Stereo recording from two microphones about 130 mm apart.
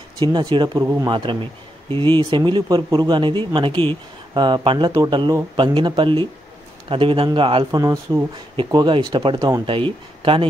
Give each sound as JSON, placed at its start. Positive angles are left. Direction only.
{"t": 0.2, "sound": "speech", "side_deg": -35}
{"t": 1.1, "sound": "a man's voice", "side_deg": -40}
{"t": 7.7, "sound": "speech", "side_deg": -25}
{"t": 8.5, "sound": "speech", "side_deg": -40}